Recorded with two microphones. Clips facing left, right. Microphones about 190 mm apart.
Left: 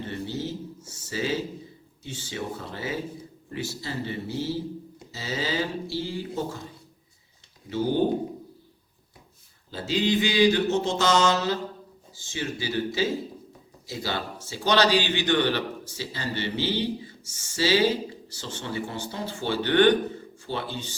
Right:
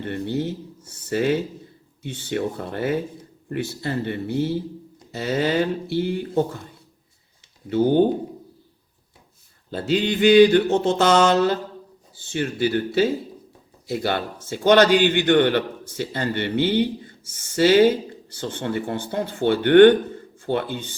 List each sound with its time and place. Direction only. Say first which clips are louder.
0.0 s a sound: right 6 dB; 60° right (ahead or behind)
2.0 s a man's voice: right 8 dB; 60° right (ahead or behind)
7.7 s a man's voice: right 8 dB; 55° right (ahead or behind)
9.6 s a man's voice: right 3 dB; 60° right (ahead or behind)